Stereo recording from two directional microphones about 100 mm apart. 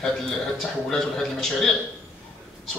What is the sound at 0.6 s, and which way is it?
A man's voice, 5° left (ahead or behind).